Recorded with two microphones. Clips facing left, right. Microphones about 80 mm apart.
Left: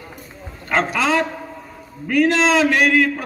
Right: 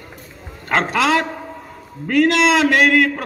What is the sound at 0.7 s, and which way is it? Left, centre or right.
Speech, right.